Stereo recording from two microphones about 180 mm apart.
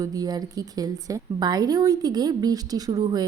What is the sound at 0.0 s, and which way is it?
A woman's voice, 20° right (ahead or behind).